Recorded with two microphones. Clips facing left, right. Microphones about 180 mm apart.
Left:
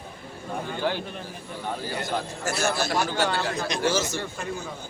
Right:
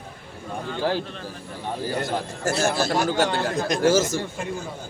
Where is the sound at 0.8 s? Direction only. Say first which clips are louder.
Right 4 dB; 35° right (ahead or behind).